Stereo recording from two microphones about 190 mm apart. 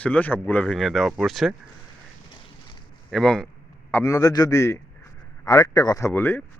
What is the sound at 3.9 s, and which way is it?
Speech, 15° left (ahead or behind).